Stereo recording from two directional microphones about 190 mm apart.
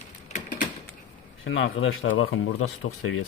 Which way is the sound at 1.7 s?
90° left.